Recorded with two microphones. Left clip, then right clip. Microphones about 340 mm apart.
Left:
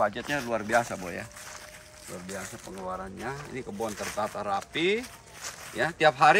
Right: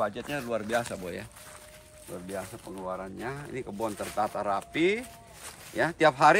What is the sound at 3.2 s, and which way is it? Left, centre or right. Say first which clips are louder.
Speech: even; centre.